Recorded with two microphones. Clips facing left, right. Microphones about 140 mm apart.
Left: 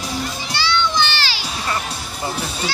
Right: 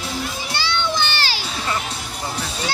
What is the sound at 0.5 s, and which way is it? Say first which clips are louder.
Children playing: left 3 dB; 50° right (ahead or behind).